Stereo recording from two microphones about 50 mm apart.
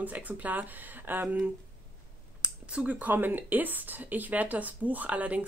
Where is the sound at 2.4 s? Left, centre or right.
Right.